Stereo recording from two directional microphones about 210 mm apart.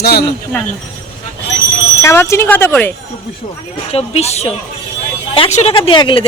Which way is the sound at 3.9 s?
30° left (ahead or behind).